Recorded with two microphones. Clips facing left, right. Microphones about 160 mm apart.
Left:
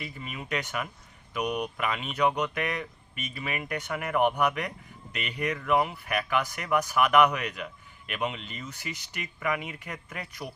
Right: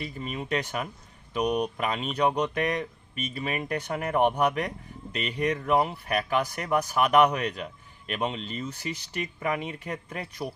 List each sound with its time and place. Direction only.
0.0 s speech: 35° right (ahead or behind)